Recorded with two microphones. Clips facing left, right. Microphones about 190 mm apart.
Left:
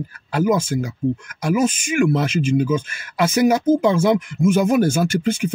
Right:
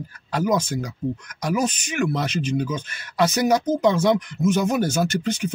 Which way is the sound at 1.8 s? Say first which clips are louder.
Left 6 dB; 10° left (ahead or behind).